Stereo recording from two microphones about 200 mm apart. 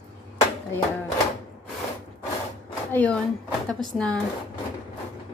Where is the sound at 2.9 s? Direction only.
5° left (ahead or behind).